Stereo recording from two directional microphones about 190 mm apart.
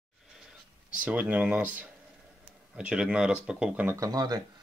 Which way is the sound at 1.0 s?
5° right (ahead or behind).